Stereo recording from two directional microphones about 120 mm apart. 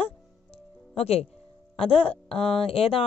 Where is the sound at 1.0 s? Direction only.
60° left (ahead or behind).